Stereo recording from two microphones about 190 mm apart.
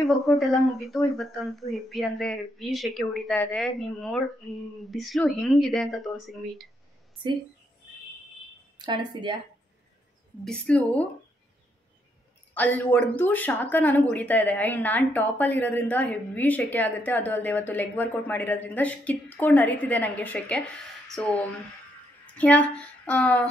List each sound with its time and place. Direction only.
0.3 s speech: centre (ahead or behind)
8.7 s speech: 25° right (ahead or behind)
10.4 s a woman's voice: 5° left (ahead or behind)
12.5 s a woman's voice: 10° left (ahead or behind)
22.4 s a woman's voice: 5° left (ahead or behind)